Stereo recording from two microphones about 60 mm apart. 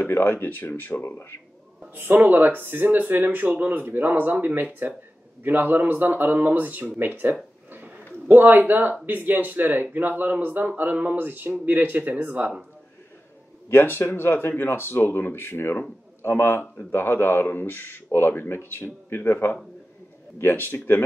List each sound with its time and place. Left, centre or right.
0.0 s speech: left
2.0 s speech: right
13.7 s speech: left